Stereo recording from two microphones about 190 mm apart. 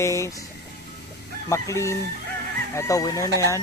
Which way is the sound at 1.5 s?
15° left (ahead or behind).